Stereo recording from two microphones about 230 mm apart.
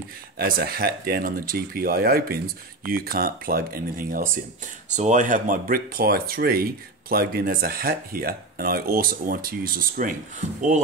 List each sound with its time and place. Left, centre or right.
0.4 s speech: right